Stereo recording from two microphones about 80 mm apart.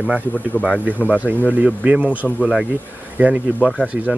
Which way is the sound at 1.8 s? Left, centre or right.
Centre.